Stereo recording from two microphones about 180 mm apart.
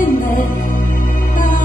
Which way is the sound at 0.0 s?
45° left (ahead or behind).